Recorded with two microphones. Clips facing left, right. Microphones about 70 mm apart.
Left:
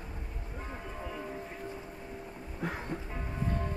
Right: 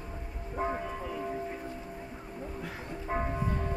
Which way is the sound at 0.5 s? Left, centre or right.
Right.